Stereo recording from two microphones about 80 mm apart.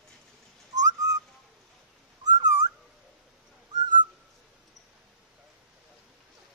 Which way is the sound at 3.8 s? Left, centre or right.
Right.